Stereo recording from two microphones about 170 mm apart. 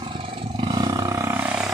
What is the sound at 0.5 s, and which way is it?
Roar, 25° right (ahead or behind).